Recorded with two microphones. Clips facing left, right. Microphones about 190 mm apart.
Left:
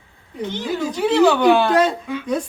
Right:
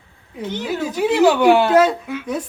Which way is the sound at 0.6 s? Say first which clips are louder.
Right 1 dB; 10° right (ahead or behind).